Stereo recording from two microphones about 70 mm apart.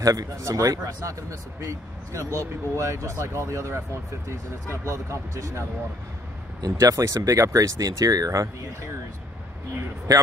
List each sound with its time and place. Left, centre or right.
0.0 s speech: right
4.8 s speech: right
6.6 s speech: right